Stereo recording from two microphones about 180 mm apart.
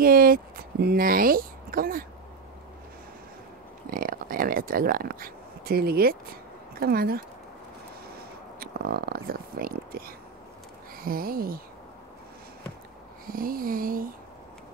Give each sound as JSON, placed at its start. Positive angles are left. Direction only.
{"t": 0.0, "sound": "speech", "side_deg": -55}
{"t": 3.9, "sound": "speech", "side_deg": -50}
{"t": 13.3, "sound": "speech", "side_deg": -55}